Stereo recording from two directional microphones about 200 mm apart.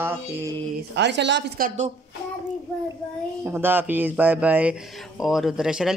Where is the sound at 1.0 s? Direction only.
60° right (ahead or behind); by 1.9 s 40° right (ahead or behind).